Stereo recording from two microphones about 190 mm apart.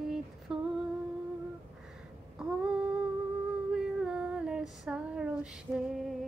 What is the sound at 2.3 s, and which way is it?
Humming, 5° right (ahead or behind).